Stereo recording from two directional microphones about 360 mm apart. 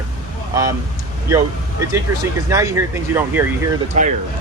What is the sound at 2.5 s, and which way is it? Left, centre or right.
Speech, centre.